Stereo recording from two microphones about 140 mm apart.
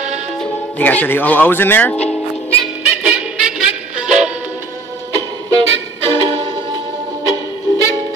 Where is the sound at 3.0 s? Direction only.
5° right (ahead or behind).